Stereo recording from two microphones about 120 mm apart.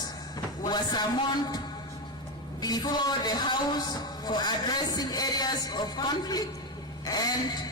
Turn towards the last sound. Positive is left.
turn(degrees=35)  # may be behind; listen again after turning